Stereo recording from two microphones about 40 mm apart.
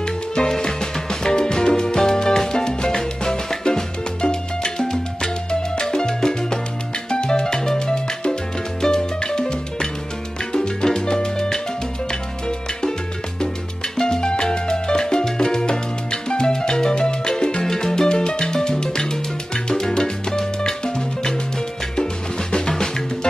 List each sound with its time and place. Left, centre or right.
0.0 s music: centre
10.5 s salsa music: centre
12.1 s music: centre
13.9 s salsa music: centre
17.3 s music: left
22.5 s music: centre